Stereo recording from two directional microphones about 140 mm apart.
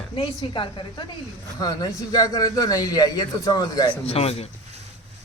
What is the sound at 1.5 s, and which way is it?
Speech, 25° left (ahead or behind).